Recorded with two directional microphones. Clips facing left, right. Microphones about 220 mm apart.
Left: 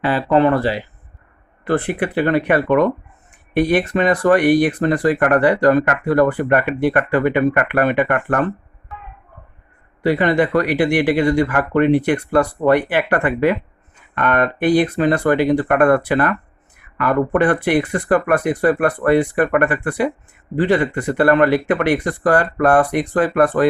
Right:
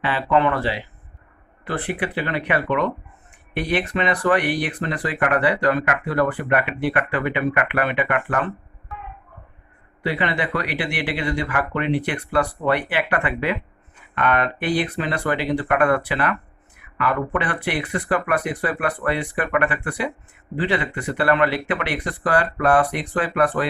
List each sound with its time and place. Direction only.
0.0 s speech: 40° left (ahead or behind)
10.0 s speech: 45° left (ahead or behind)